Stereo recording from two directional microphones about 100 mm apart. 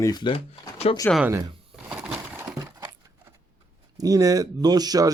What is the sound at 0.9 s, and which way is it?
Speech, 90° left.